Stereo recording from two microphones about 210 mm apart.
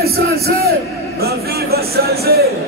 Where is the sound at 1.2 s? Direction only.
50° right (ahead or behind).